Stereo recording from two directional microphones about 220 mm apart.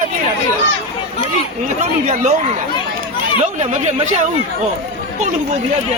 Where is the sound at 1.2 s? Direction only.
35° right (ahead or behind).